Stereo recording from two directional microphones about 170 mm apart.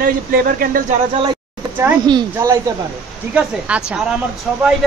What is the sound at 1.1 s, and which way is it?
Speech, 25° right (ahead or behind).